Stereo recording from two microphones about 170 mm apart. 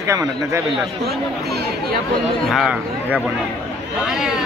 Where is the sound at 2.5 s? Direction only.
5° right (ahead or behind).